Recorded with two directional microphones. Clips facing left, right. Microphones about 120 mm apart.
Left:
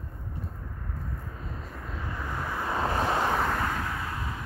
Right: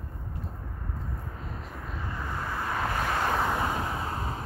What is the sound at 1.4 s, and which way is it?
Vehicle, 15° right (ahead or behind).